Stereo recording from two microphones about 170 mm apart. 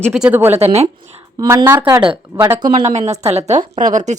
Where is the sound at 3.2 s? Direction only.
40° right (ahead or behind).